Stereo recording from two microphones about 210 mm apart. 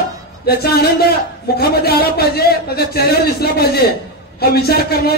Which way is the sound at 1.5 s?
50° left (ahead or behind).